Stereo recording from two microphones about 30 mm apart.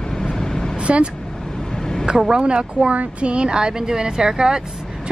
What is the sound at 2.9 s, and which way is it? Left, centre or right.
A woman's voice, right.